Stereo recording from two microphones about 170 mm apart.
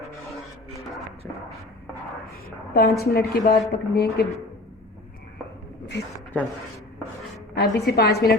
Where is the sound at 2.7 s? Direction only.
65° left (ahead or behind).